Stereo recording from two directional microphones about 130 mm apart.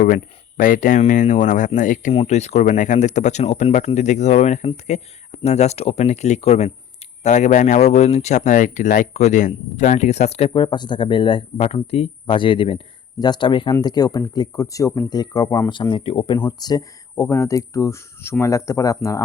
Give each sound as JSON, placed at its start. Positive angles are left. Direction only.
{"t": 0.0, "sound": "speech", "side_deg": 90}
{"t": 2.1, "sound": "speech", "side_deg": 60}
{"t": 7.2, "sound": "speech", "side_deg": 65}
{"t": 10.5, "sound": "speech", "side_deg": 35}
{"t": 11.6, "sound": "speech", "side_deg": 50}
{"t": 12.2, "sound": "speech", "side_deg": 40}
{"t": 15.7, "sound": "speech", "side_deg": 40}